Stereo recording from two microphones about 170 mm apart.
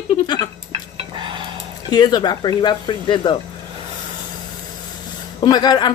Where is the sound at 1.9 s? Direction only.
25° left (ahead or behind).